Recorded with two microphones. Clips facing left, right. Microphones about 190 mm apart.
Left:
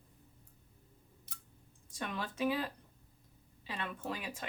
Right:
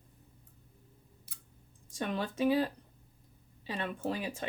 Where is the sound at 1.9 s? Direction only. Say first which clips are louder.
Right 6 dB; 35° right (ahead or behind).